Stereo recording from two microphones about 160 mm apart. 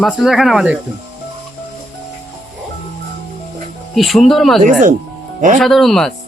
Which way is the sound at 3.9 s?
Centre (ahead or behind).